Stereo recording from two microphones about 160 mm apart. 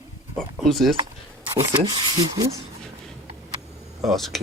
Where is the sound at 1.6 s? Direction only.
20° right (ahead or behind).